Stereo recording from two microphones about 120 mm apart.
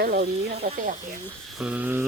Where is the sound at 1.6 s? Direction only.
10° right (ahead or behind).